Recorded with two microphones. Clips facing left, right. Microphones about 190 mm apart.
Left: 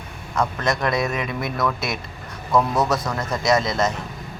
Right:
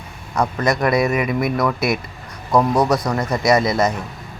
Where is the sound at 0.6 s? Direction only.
Centre (ahead or behind).